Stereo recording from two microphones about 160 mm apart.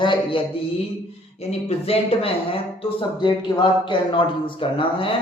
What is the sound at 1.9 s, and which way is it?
Speech, 35° left (ahead or behind).